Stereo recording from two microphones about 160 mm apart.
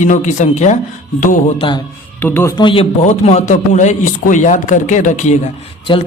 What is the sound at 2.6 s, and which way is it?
A man's voice, 35° left (ahead or behind).